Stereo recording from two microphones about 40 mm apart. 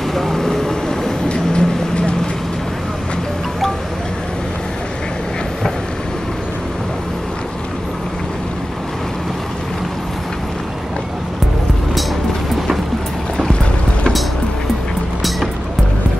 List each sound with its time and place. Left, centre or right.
0.1 s vehicle: centre
1.3 s vehicle: left